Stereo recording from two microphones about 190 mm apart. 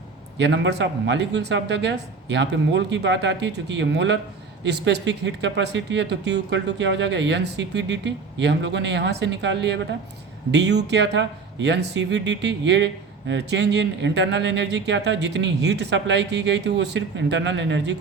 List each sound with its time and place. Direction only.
0.3 s speech: 65° right (ahead or behind)